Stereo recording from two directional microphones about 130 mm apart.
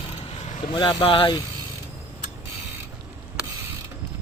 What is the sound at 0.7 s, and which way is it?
Speech, 35° left (ahead or behind).